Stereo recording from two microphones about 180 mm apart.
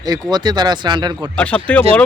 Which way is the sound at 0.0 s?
20° right (ahead or behind).